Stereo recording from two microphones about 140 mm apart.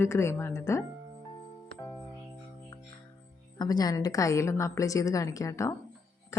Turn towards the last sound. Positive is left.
turn(degrees=20)  # may be behind; listen again after turning